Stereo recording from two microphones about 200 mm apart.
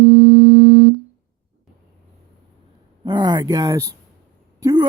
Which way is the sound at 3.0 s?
20° right (ahead or behind).